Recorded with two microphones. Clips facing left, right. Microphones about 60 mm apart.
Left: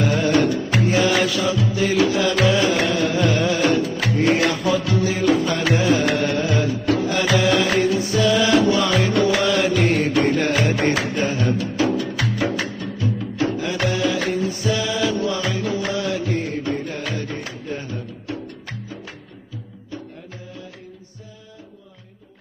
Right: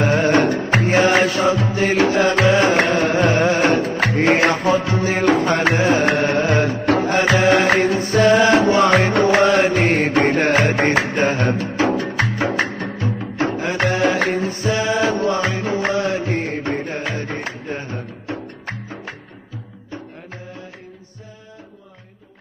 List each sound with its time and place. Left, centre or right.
0.0 s music: right
12.6 s music: right
13.2 s music: right